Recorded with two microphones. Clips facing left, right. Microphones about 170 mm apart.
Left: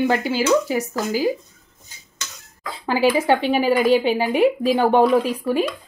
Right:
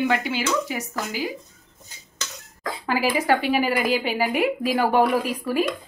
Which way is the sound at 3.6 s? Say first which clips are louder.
Left 5 dB; 30° left (ahead or behind).